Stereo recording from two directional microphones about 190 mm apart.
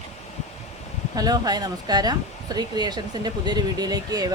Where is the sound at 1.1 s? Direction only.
20° right (ahead or behind).